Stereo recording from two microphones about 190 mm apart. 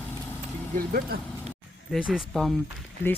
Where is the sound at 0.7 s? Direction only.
50° right (ahead or behind).